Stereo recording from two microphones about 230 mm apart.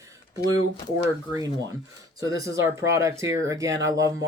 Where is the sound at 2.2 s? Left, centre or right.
Centre.